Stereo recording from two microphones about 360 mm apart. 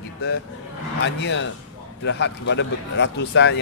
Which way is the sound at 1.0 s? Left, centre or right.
Left.